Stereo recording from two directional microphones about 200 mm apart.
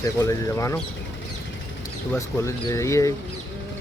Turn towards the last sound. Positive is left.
turn(degrees=15)  # may be behind; listen again after turning